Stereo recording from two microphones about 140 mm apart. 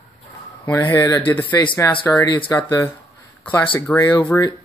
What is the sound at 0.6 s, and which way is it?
Speech, 15° left (ahead or behind).